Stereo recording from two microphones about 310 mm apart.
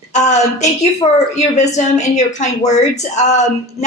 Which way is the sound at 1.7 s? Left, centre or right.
Left.